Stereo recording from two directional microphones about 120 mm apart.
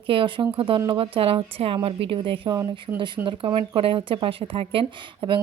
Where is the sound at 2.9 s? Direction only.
25° right (ahead or behind).